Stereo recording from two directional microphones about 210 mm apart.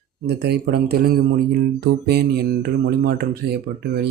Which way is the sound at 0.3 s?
50° right (ahead or behind).